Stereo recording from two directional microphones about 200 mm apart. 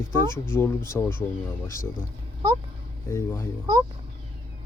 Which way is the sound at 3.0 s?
15° left (ahead or behind).